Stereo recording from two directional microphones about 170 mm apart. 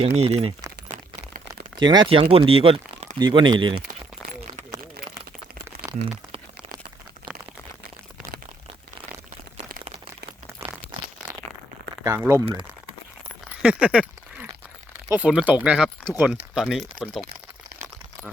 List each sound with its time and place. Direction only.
0.0 s speech: 40° right (ahead or behind)
0.9 s a sound: 55° right (ahead or behind)
1.8 s speech: 25° right (ahead or behind)
6.3 s a sound: 25° right (ahead or behind)
10.6 s crumpling: 15° right (ahead or behind)
12.0 s speech: 15° right (ahead or behind)
13.6 s speech: 5° right (ahead or behind)
15.1 s speech: 5° right (ahead or behind)